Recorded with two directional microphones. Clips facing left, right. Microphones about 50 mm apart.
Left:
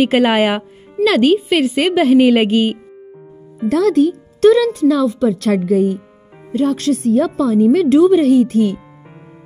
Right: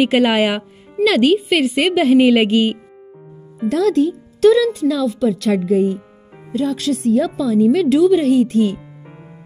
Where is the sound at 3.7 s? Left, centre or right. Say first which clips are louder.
Left 3 dB; left.